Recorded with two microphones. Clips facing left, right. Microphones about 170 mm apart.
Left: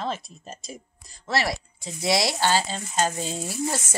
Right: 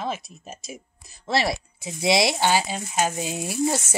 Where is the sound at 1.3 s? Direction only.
25° right (ahead or behind).